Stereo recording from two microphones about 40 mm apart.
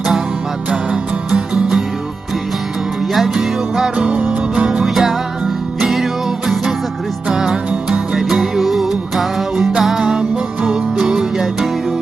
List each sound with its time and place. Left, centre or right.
1.3 s music: centre
3.1 s music: centre
3.9 s music: right
4.8 s music: centre
7.3 s music: centre